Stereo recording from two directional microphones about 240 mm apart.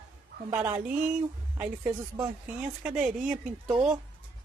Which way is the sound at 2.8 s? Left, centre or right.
Centre.